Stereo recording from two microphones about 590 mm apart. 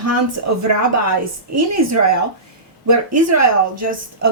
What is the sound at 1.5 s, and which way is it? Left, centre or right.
Speech, right.